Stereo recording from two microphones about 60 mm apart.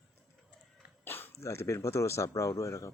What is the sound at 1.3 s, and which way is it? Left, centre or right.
Speech, left.